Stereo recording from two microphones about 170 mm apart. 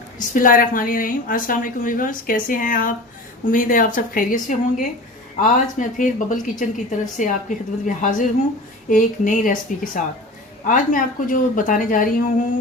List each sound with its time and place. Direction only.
0.2 s a woman's voice: 55° left (ahead or behind)